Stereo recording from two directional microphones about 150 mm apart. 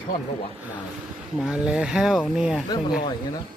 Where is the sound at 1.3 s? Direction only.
5° right (ahead or behind).